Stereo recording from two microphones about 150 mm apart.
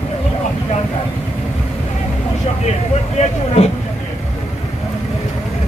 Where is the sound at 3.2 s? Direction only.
50° left (ahead or behind).